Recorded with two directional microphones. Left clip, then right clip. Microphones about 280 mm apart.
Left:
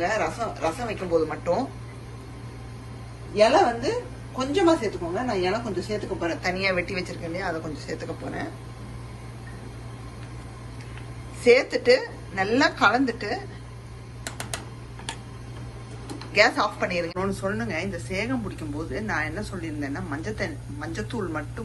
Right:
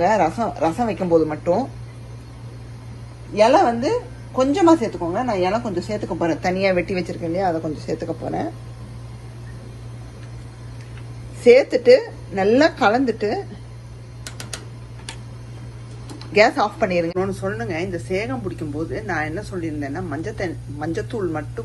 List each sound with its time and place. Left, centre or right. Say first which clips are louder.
0.0 s speech: right 8 dB; centre
1.3 s a woman's voice: right 5 dB; centre
3.3 s a woman's voice: right 4 dB; right
6.3 s a woman's voice: right 5 dB; centre
11.4 s a woman's voice: right 6 dB; centre
16.3 s a woman's voice: right 4 dB; centre